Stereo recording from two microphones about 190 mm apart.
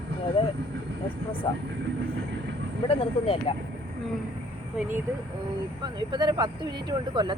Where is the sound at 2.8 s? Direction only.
30° left (ahead or behind).